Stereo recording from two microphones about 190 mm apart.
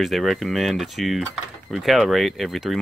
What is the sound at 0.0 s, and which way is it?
Speech, centre (ahead or behind).